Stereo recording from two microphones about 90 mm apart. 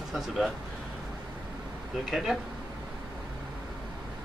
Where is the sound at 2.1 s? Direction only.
5° right (ahead or behind).